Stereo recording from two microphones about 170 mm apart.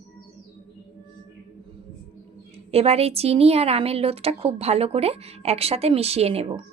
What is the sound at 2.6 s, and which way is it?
Speech, 35° right (ahead or behind).